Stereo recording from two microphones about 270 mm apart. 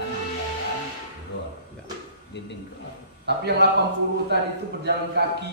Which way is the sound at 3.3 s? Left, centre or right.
Right.